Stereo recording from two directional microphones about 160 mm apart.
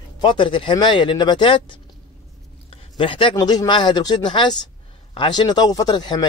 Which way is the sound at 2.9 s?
30° left (ahead or behind).